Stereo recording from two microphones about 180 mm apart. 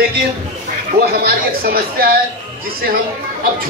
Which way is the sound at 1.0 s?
60° right (ahead or behind).